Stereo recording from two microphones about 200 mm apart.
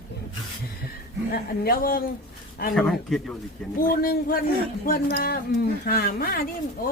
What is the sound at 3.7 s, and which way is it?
Speech, 45° left (ahead or behind).